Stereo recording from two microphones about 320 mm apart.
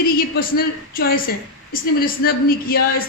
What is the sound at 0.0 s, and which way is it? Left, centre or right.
Speech, left.